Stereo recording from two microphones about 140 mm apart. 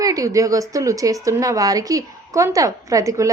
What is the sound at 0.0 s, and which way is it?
A woman's voice, 25° right (ahead or behind).